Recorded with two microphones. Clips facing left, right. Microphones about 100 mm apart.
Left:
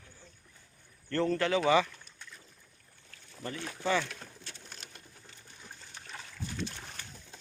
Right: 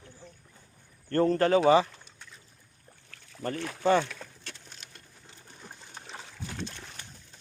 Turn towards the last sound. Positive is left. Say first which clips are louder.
# right 2 dB
turn(degrees=-25)  # may be behind; listen again after turning